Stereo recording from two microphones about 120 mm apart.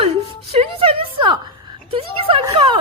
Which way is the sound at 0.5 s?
50° right (ahead or behind).